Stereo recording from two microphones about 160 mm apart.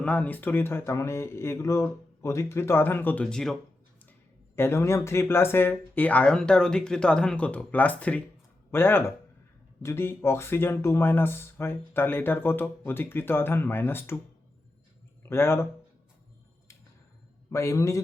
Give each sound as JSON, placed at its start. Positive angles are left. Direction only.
{"t": 0.0, "sound": "speech", "side_deg": 10}
{"t": 4.5, "sound": "speech", "side_deg": 15}
{"t": 15.2, "sound": "speech", "side_deg": 15}
{"t": 17.5, "sound": "a man's voice", "side_deg": 20}